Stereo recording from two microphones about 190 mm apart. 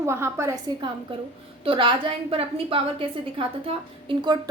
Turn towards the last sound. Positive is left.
turn(degrees=-30)  # may be behind; listen again after turning